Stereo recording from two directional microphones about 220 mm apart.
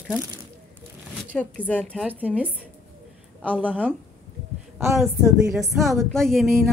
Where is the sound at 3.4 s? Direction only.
10° right (ahead or behind).